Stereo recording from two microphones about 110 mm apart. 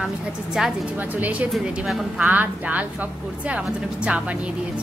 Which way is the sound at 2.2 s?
15° right (ahead or behind).